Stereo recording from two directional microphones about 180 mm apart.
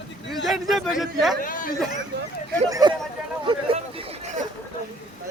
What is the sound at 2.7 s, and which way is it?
Speech, 20° right (ahead or behind).